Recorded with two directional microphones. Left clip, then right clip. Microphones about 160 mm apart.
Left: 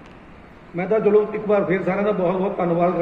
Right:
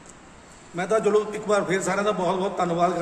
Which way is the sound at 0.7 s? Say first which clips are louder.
Left 4 dB; 25° right (ahead or behind).